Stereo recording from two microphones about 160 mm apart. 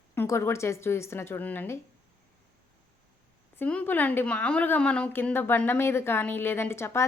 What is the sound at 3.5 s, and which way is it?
Speech, 10° left (ahead or behind).